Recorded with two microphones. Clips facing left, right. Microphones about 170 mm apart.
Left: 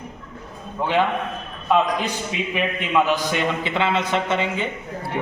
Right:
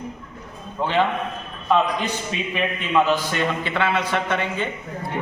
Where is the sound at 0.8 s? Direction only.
15° left (ahead or behind).